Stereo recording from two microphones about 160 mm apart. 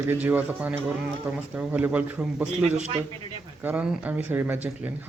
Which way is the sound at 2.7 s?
45° right (ahead or behind).